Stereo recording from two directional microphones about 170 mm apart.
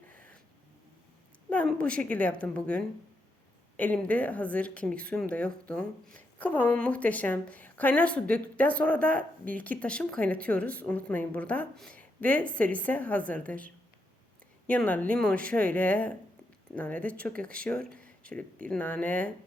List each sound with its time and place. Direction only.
0.1 s a sound: 10° left (ahead or behind)
1.5 s a woman's voice: 5° left (ahead or behind)
14.7 s a woman's voice: 10° left (ahead or behind)